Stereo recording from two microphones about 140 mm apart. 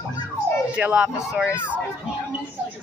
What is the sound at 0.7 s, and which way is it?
Speech, 10° right (ahead or behind).